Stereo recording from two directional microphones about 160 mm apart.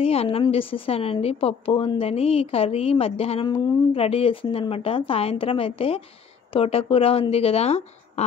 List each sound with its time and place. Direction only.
0.0 s a woman's voice: 40° left (ahead or behind)